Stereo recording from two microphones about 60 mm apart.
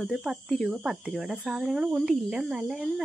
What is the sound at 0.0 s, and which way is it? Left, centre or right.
Speech, centre.